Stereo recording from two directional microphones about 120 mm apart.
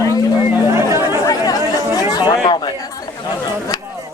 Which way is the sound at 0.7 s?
25° right (ahead or behind).